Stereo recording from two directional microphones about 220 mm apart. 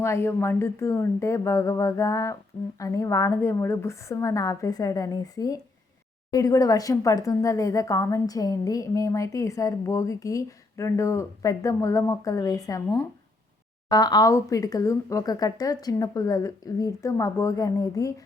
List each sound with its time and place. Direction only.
0.0 s a woman's voice: 10° left (ahead or behind)